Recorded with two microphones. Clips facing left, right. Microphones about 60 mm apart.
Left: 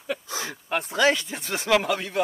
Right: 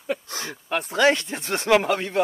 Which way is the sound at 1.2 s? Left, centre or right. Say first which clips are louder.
Right 3 dB; right.